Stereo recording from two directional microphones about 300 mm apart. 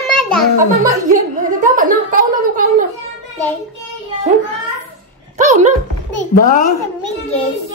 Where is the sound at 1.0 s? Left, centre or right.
Right.